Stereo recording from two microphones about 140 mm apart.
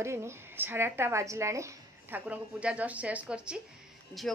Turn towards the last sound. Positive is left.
turn(degrees=0)  # may be behind; listen again after turning